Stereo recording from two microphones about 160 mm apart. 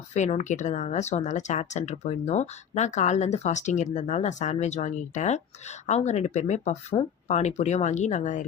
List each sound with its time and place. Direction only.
0.1 s speech: 45° left (ahead or behind)